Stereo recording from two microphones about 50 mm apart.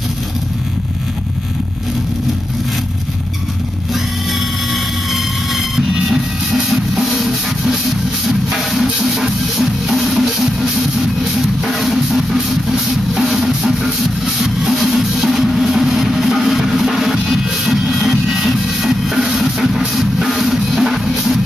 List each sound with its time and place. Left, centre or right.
5.1 s train: centre
8.3 s music: centre